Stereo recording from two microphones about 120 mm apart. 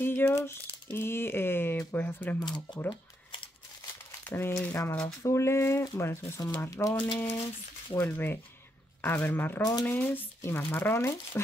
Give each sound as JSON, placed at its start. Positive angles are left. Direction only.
{"t": 0.0, "sound": "speech", "side_deg": 20}
{"t": 2.4, "sound": "speech", "side_deg": 40}
{"t": 4.2, "sound": "speech", "side_deg": 20}
{"t": 9.6, "sound": "speech", "side_deg": 30}
{"t": 9.8, "sound": "speech", "side_deg": 15}